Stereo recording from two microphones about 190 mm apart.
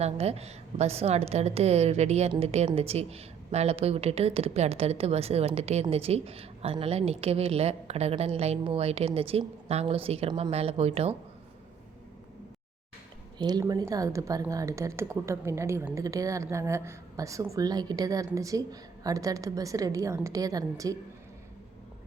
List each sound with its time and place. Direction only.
0.0 s a woman's voice: 35° right (ahead or behind)
13.4 s a woman's voice: 20° right (ahead or behind)